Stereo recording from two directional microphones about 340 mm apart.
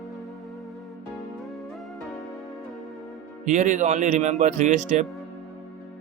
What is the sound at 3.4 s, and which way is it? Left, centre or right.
Speech, right.